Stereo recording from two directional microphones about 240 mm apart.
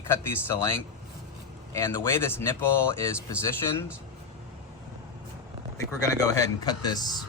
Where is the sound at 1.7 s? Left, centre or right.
Centre.